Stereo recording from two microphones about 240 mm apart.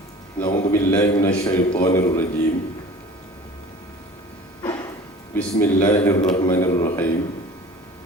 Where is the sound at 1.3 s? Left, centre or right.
Left.